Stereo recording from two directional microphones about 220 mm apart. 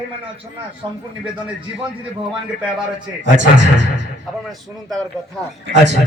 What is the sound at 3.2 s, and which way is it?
Speech, 55° right (ahead or behind).